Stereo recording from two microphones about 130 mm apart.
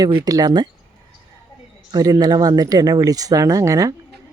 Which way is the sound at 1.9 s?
30° right (ahead or behind).